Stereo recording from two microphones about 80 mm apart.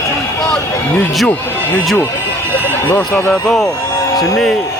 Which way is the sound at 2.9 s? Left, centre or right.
Left.